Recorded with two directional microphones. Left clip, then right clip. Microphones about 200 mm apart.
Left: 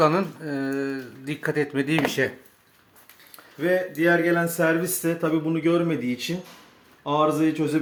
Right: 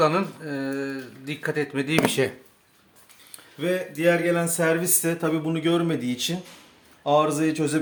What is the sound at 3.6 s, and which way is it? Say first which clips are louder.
Speech: left 3 dB; 15° right (ahead or behind).